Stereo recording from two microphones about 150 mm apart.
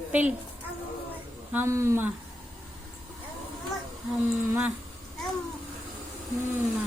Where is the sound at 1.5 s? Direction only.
20° right (ahead or behind).